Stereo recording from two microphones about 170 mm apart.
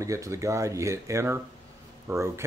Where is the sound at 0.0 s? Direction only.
20° right (ahead or behind).